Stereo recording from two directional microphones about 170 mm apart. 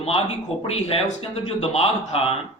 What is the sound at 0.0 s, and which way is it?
A man's voice, 35° left (ahead or behind).